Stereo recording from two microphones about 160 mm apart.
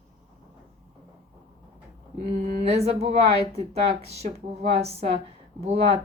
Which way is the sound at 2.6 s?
40° right (ahead or behind).